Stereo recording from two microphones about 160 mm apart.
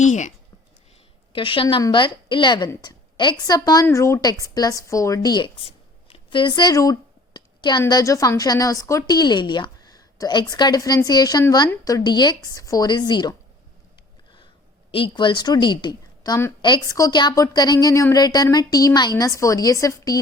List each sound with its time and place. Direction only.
0.0 s speech: 50° left (ahead or behind)
1.3 s a woman's voice: 35° left (ahead or behind)
14.9 s a woman's voice: 30° left (ahead or behind)